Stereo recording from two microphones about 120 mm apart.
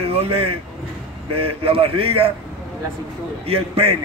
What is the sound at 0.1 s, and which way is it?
A man's voice, 55° right (ahead or behind).